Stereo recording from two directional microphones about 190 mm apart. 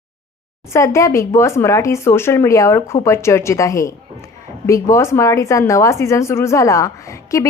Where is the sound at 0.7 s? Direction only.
15° left (ahead or behind).